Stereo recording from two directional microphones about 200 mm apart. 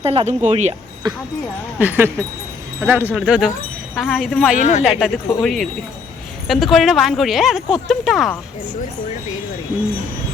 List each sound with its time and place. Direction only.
0.0 s speech: 30° right (ahead or behind)
1.8 s a woman's voice: 10° right (ahead or behind)
4.5 s speech: 35° left (ahead or behind)
4.8 s a woman's voice: centre (ahead or behind)